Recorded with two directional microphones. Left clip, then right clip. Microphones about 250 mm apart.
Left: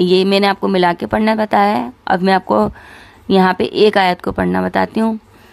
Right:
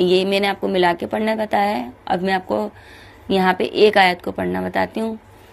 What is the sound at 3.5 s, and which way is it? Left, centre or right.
Mantra, left.